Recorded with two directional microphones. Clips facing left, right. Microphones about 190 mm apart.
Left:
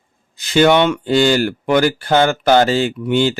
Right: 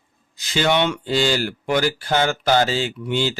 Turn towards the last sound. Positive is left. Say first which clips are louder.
# left 7 dB
turn(degrees=55)  # may be behind; listen again after turning